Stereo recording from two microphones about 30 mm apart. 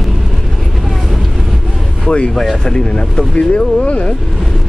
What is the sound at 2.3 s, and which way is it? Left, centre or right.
Speech, centre.